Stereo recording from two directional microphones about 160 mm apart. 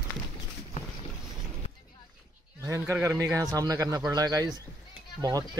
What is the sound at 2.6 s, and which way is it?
A man's voice, 15° right (ahead or behind).